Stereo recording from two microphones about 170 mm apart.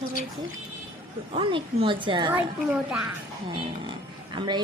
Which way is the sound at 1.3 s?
30° right (ahead or behind).